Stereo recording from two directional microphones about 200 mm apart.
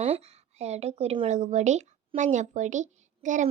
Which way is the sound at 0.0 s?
30° right (ahead or behind).